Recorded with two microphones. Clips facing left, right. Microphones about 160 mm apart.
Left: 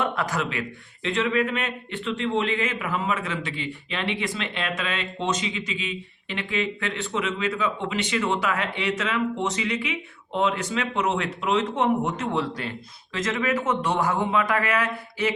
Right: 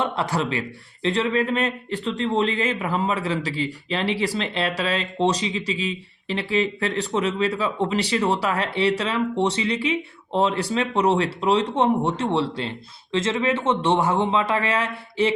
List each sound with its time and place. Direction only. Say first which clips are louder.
0.0 s a man's voice: right 2 dB; 30° right (ahead or behind)